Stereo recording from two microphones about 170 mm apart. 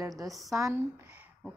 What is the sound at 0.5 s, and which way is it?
Speech, 20° right (ahead or behind).